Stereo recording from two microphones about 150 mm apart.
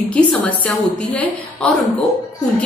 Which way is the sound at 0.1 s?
10° left (ahead or behind).